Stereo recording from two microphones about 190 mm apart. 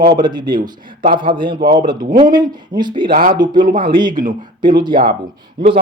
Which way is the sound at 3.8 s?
25° right (ahead or behind).